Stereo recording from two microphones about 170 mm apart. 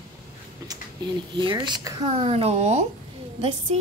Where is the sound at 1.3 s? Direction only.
25° right (ahead or behind).